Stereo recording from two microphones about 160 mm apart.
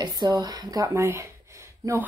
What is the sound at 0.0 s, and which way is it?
Speech, 25° right (ahead or behind).